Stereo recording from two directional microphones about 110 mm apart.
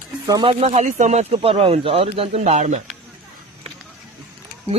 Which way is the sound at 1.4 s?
55° right (ahead or behind).